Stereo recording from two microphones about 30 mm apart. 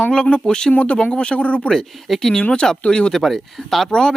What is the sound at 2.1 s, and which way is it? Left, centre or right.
Speech, centre.